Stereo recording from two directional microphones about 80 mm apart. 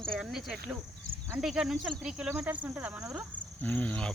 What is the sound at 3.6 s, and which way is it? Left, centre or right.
Speech, centre.